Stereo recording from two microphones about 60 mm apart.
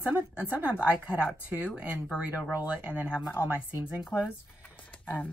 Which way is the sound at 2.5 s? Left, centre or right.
Right.